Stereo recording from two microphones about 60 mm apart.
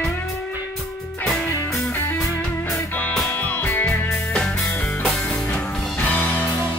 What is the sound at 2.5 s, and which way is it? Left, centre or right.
Music, left.